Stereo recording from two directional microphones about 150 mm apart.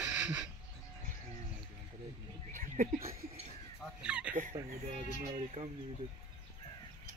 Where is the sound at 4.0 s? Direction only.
10° right (ahead or behind).